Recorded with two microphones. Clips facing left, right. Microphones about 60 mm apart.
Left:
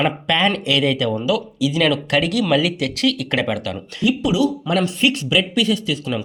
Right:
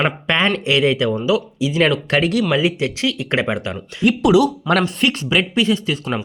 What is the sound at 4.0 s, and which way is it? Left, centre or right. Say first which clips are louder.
Speech: right 4 dB; right.